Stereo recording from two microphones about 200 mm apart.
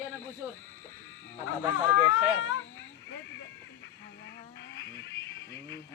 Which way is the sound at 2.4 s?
75° left (ahead or behind).